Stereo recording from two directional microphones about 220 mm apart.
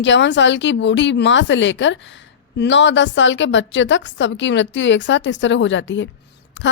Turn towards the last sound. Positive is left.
turn(degrees=55)  # may be behind; listen again after turning